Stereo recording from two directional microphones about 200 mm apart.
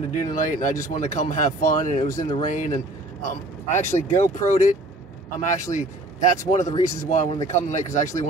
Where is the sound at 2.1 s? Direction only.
20° left (ahead or behind).